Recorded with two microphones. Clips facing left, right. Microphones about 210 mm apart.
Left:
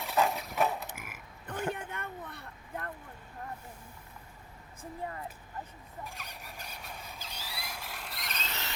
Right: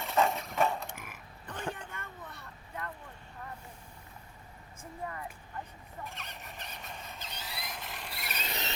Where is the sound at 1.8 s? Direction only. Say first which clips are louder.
Left 5 dB; 60° left (ahead or behind).